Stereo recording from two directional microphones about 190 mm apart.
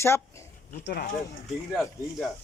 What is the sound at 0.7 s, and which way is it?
Speech, 50° left (ahead or behind).